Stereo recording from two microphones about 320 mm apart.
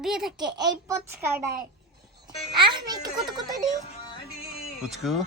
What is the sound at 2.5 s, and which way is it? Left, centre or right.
Speech, centre.